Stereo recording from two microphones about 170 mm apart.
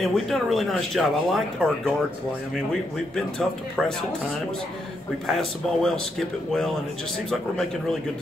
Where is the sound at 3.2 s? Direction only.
5° left (ahead or behind).